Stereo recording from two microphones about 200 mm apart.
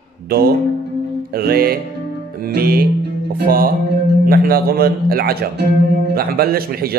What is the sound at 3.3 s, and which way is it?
Speech, 45° right (ahead or behind).